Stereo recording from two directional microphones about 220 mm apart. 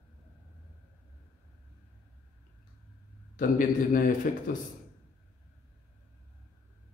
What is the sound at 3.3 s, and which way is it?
Speech, 35° left (ahead or behind).